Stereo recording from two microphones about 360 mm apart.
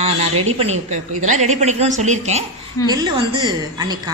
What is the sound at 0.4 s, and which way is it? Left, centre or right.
A woman's voice, centre.